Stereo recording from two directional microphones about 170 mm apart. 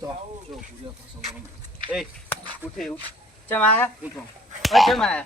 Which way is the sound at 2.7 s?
Centre (ahead or behind).